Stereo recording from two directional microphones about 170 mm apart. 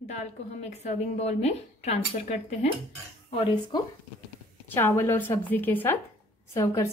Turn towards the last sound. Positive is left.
turn(degrees=15)  # may be behind; listen again after turning